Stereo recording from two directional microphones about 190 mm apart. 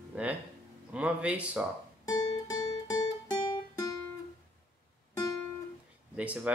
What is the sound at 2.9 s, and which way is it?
Music, 20° left (ahead or behind).